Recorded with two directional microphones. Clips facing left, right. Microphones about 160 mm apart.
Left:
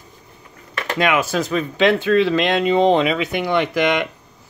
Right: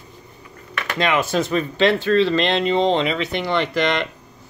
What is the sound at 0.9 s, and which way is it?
Speech, 5° left (ahead or behind).